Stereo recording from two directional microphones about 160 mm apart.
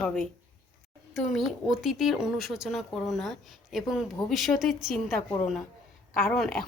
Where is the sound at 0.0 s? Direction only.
5° left (ahead or behind).